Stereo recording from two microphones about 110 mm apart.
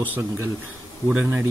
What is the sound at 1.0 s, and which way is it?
Speech, 15° right (ahead or behind).